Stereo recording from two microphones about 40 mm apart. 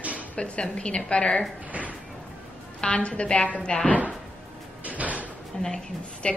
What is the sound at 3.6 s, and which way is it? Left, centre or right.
Speech, centre.